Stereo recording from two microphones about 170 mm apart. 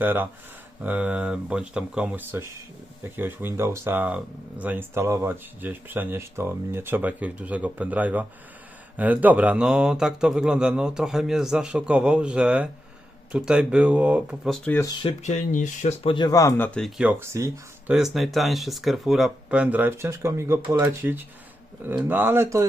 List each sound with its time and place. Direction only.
0.0 s speech: 10° right (ahead or behind); by 14.8 s 10° left (ahead or behind)
15.2 s speech: 45° left (ahead or behind)
16.1 s speech: 25° left (ahead or behind)
17.0 s speech: 10° right (ahead or behind)
17.9 s speech: centre (ahead or behind)